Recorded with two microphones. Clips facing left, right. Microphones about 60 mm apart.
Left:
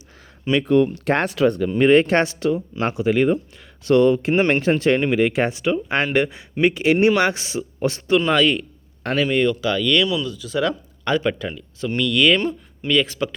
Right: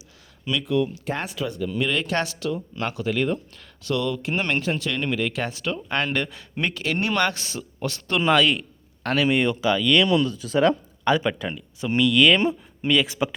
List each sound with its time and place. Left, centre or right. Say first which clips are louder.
0.4 s speech: left 7 dB; left
1.7 s speech: left 9 dB; left
3.8 s speech: left 10 dB; left
8.3 s a man's voice: left 1 dB; centre
10.1 s speech: right 3 dB; right
11.0 s speech: left 1 dB; centre
12.4 s speech: right 1 dB; centre